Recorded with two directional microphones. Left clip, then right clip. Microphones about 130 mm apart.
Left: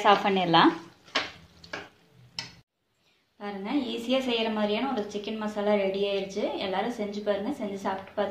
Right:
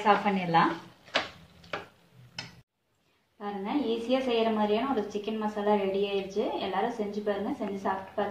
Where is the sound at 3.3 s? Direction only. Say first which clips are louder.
Left 1 dB; 75° left (ahead or behind).